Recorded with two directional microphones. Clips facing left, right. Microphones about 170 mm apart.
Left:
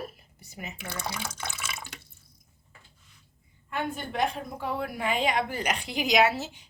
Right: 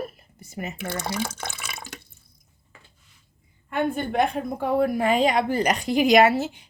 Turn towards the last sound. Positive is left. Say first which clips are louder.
# right 6 dB
turn(degrees=-55)  # may be behind; listen again after turning